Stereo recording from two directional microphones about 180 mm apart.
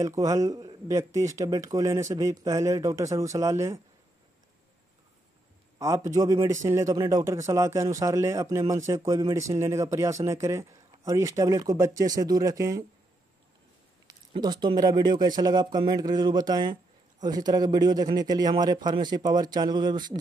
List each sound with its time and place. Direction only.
0.0 s a man's voice: 20° right (ahead or behind)
5.8 s a man's voice: 15° right (ahead or behind)
14.0 s a man's voice: 25° right (ahead or behind)